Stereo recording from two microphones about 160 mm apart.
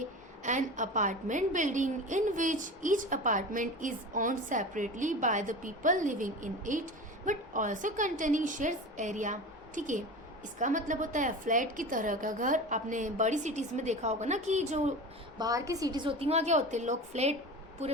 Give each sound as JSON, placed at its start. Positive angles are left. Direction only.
{"t": 0.4, "sound": "a woman's voice", "side_deg": -50}
{"t": 15.4, "sound": "a woman's voice", "side_deg": -20}